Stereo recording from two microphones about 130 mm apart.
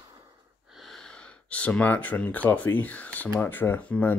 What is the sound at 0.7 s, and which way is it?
Speech, centre (ahead or behind).